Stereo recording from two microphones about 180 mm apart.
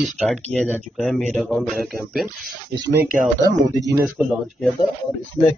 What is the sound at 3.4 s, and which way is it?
Speech, 20° right (ahead or behind).